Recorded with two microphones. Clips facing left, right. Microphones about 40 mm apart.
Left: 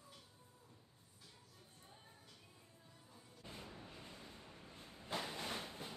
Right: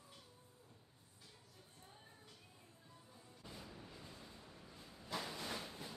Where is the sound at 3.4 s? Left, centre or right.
Left.